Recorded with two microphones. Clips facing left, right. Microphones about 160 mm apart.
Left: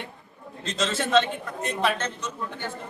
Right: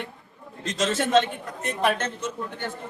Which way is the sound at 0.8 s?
50° right (ahead or behind).